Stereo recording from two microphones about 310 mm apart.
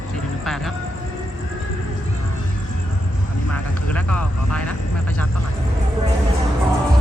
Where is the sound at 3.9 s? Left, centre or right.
Centre.